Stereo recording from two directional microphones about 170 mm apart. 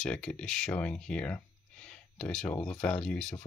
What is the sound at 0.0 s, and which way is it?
Speech, 5° left (ahead or behind).